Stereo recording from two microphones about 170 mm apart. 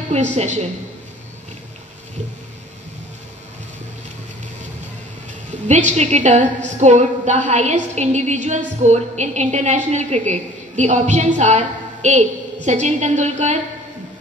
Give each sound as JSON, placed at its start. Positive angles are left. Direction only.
{"t": 0.1, "sound": "a woman's voice", "side_deg": -40}
{"t": 5.7, "sound": "a woman's voice", "side_deg": -45}